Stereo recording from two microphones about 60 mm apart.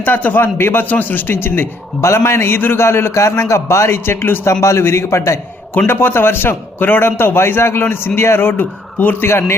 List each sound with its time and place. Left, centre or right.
0.0 s a man's voice: left
5.9 s a man's voice: left